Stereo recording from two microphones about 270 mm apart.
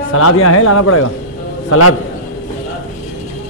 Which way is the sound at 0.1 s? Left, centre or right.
Left.